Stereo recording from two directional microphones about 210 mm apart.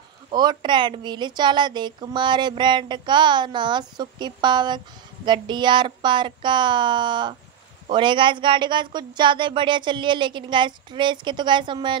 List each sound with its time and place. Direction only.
0.3 s speech: 20° right (ahead or behind)